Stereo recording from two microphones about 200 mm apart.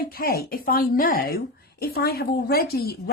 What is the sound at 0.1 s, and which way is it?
Speech, 50° left (ahead or behind).